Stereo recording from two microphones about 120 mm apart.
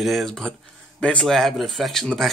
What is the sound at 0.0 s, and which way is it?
Speech, centre (ahead or behind).